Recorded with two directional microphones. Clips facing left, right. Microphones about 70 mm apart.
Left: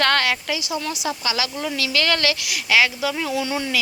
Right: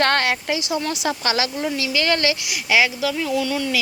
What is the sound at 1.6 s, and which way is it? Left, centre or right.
Speech, right.